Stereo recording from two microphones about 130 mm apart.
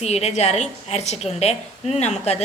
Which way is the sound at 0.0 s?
55° left (ahead or behind).